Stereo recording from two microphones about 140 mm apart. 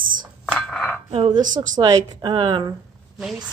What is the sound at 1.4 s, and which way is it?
Speech, 65° right (ahead or behind).